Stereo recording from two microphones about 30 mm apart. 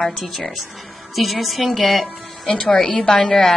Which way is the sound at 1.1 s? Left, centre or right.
Centre.